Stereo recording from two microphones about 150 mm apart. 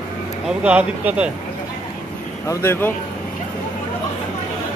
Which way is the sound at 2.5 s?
15° left (ahead or behind).